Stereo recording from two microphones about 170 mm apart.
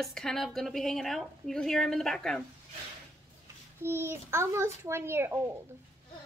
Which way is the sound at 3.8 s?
15° right (ahead or behind).